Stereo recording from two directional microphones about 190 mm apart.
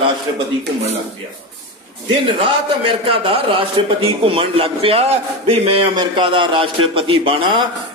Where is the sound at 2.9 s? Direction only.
25° right (ahead or behind).